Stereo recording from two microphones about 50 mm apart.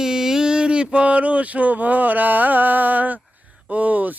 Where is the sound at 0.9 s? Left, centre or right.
Right.